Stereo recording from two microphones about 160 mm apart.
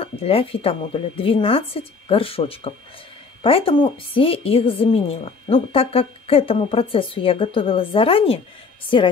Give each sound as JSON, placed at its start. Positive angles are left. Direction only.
{"t": 0.0, "sound": "speech", "side_deg": 35}